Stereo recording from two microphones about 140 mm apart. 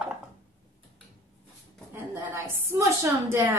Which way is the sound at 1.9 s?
20° right (ahead or behind).